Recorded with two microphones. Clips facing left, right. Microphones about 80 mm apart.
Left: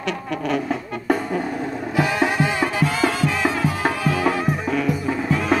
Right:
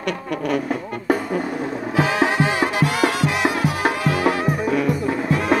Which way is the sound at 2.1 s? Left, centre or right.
Centre.